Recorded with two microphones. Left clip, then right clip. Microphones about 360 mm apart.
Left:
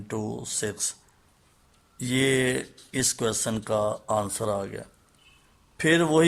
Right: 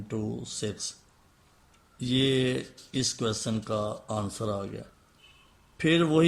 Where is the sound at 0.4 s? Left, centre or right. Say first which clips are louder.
Left 4 dB; centre.